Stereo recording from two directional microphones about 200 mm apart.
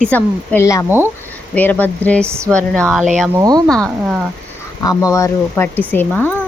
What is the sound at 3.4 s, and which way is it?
Speech, 20° right (ahead or behind).